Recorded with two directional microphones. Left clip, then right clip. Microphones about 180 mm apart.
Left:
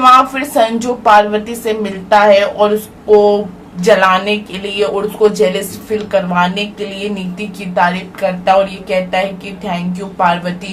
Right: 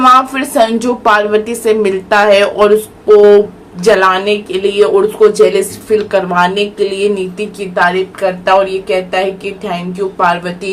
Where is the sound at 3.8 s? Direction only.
20° right (ahead or behind).